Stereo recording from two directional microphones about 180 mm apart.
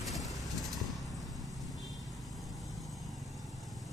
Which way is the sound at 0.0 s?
Centre (ahead or behind).